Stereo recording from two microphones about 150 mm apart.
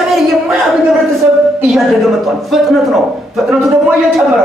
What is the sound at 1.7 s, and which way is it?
A man's voice, centre (ahead or behind).